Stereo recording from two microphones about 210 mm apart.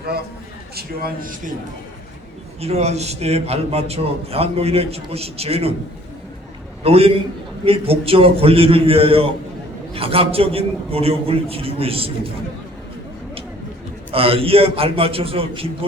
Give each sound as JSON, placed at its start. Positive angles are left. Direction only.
{"t": 0.8, "sound": "a man's voice", "side_deg": -45}
{"t": 2.6, "sound": "a man's voice", "side_deg": -30}
{"t": 6.8, "sound": "a man's voice", "side_deg": -30}
{"t": 14.1, "sound": "a man's voice", "side_deg": -25}